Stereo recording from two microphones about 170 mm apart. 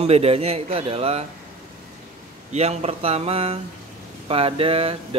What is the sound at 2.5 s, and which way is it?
Speech, 40° right (ahead or behind).